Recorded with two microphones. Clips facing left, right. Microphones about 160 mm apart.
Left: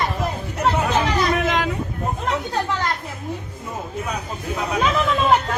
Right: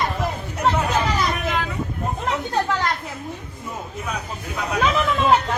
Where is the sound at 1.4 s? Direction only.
90° left.